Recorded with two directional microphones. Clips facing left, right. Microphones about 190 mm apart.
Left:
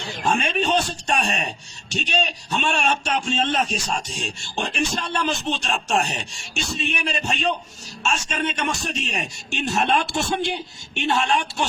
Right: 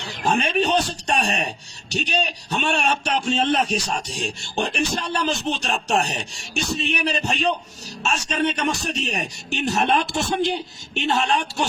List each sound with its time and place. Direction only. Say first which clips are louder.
0.3 s speech: right 1 dB; 35° right (ahead or behind)